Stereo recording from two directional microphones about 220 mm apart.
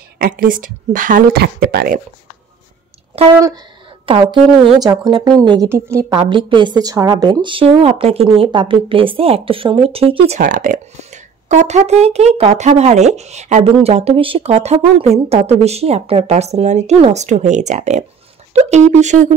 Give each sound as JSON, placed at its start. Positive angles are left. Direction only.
{"t": 0.2, "sound": "a woman's voice", "side_deg": -40}
{"t": 3.2, "sound": "a woman's voice", "side_deg": -20}